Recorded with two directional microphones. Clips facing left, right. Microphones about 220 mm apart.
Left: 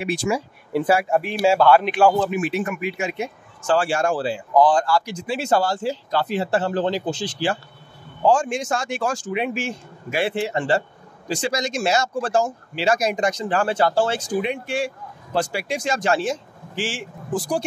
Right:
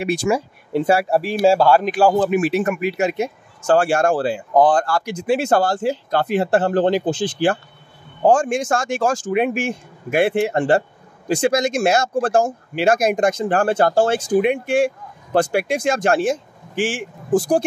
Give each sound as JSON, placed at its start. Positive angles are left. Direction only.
{"t": 0.0, "sound": "speech", "side_deg": -40}
{"t": 0.7, "sound": "speech", "side_deg": -30}